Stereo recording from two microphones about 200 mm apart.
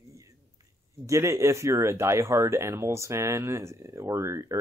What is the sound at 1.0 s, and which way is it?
Speech, 15° right (ahead or behind).